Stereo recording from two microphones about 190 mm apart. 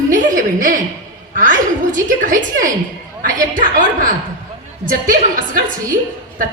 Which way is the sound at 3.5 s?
45° right (ahead or behind).